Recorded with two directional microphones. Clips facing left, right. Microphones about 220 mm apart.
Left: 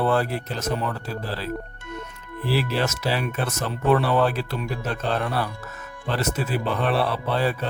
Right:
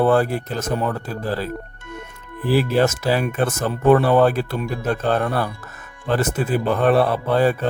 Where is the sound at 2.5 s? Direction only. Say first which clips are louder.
Right 7 dB; 50° right (ahead or behind).